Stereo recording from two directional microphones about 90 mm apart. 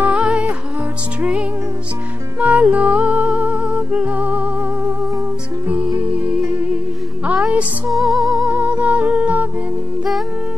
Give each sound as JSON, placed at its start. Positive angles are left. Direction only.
{"t": 0.0, "sound": "music", "side_deg": -10}
{"t": 2.4, "sound": "music", "side_deg": -15}
{"t": 7.2, "sound": "music", "side_deg": -10}
{"t": 7.9, "sound": "music", "side_deg": 0}
{"t": 8.5, "sound": "music", "side_deg": -15}